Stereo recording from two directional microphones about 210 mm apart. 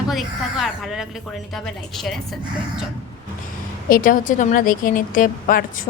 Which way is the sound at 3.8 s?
40° left (ahead or behind).